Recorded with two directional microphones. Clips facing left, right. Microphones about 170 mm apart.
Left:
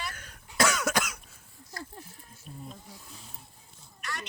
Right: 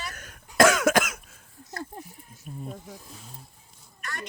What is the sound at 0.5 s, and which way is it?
Cough, 90° right.